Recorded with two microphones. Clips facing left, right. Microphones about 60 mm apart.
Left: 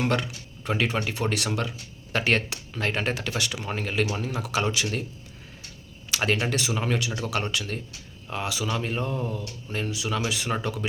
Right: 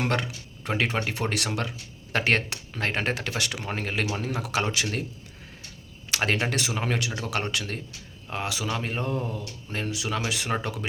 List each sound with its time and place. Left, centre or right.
0.0 s speech: right
6.2 s speech: right
9.4 s speech: centre
9.7 s speech: right